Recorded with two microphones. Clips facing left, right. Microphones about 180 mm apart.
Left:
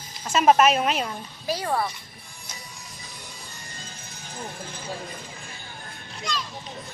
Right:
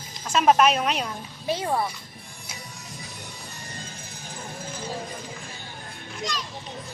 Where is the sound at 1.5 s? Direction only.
20° right (ahead or behind).